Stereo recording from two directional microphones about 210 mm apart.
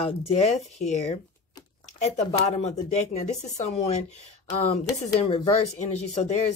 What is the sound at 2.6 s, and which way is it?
Speech, 30° left (ahead or behind).